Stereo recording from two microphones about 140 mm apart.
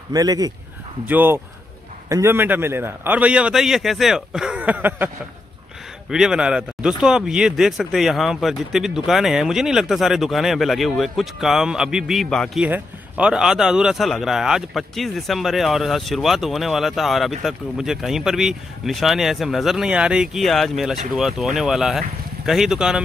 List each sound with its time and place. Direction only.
0.1 s speech: 25° right (ahead or behind)
1.0 s a man's voice: 15° right (ahead or behind); by 12.6 s centre (ahead or behind)
12.6 s a man's voice: 10° right (ahead or behind)